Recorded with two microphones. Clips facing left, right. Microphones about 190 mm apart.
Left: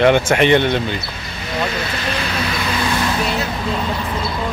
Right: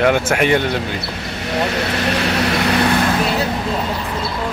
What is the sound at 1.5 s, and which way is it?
Vehicle, 70° right (ahead or behind).